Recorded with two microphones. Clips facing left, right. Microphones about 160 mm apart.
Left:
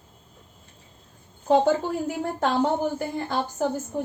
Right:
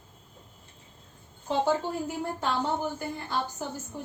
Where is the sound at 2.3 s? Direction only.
55° left (ahead or behind).